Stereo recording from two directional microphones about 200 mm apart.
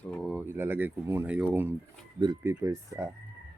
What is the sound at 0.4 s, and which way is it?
Speech, 10° right (ahead or behind).